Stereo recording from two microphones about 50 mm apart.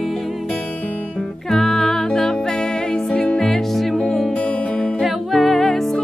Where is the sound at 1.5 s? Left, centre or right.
Centre.